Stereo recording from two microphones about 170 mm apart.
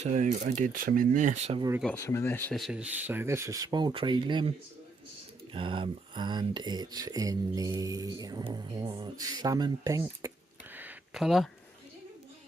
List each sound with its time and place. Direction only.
0.0 s speech: 45° right (ahead or behind)
2.0 s speech: 15° left (ahead or behind)
2.5 s speech: centre (ahead or behind); by 4.5 s 30° right (ahead or behind)
5.5 s speech: 30° right (ahead or behind)
10.8 s a sound: 5° right (ahead or behind)